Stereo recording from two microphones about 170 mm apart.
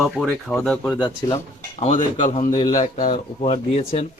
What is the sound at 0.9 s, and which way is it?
Speech, 25° left (ahead or behind).